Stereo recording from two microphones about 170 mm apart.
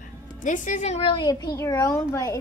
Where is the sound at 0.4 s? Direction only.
50° left (ahead or behind); by 2.4 s 20° left (ahead or behind).